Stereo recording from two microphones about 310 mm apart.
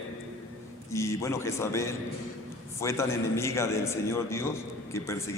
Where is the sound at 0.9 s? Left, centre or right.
Centre.